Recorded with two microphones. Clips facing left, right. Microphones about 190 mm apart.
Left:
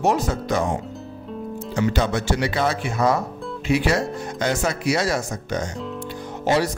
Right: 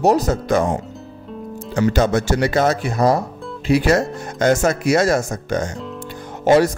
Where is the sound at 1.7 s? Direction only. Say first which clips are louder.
Right 5 dB; 45° right (ahead or behind).